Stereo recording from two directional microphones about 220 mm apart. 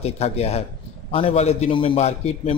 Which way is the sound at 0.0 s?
30° left (ahead or behind).